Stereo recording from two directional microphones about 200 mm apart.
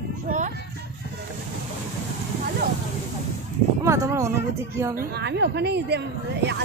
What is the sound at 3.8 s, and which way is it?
Speech, 15° right (ahead or behind).